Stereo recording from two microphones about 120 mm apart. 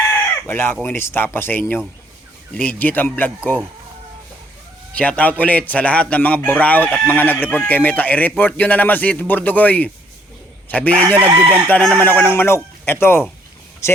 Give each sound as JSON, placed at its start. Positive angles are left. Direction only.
{"t": 0.1, "sound": "speech", "side_deg": 20}
{"t": 4.9, "sound": "speech", "side_deg": 10}
{"t": 11.2, "sound": "speech", "side_deg": -15}
{"t": 11.7, "sound": "speech", "side_deg": 10}